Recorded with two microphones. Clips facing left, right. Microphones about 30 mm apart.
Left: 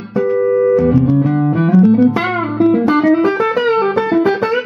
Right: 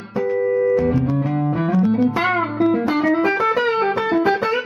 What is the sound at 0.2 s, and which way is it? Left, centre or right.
Music, centre.